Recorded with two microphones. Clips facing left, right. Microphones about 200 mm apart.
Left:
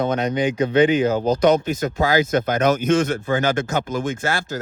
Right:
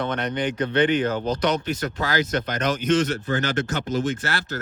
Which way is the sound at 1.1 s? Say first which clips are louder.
Left 7 dB; 45° left (ahead or behind).